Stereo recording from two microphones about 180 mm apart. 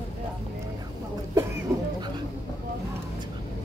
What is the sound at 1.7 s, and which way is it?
Music, 20° right (ahead or behind).